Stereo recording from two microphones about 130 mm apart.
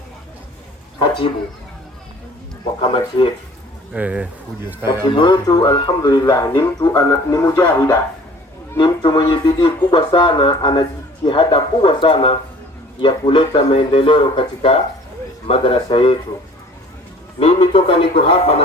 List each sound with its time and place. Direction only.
0.9 s a sound: 40° left (ahead or behind)
2.8 s speech: 40° left (ahead or behind)
3.9 s speech: 10° right (ahead or behind)
5.1 s speech: 35° left (ahead or behind); by 7.9 s 20° left (ahead or behind)
9.0 s speech: 35° left (ahead or behind)
17.4 s speech: 45° left (ahead or behind)